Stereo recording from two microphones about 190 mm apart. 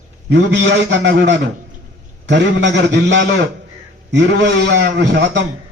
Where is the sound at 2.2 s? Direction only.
70° right (ahead or behind).